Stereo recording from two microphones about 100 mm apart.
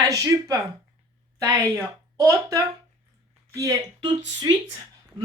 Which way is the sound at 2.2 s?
30° right (ahead or behind).